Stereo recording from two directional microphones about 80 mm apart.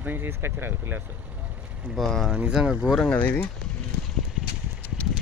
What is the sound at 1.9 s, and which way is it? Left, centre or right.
Speech, centre.